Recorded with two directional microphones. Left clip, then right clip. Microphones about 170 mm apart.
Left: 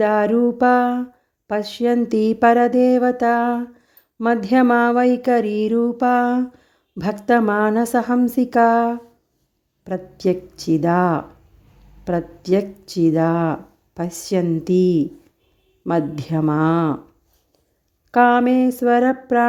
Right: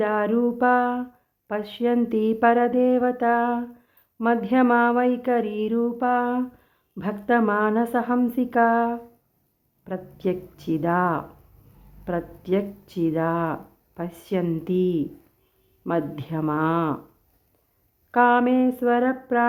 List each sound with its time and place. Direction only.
0.0 s speech: 40° left (ahead or behind)
18.1 s speech: 40° left (ahead or behind)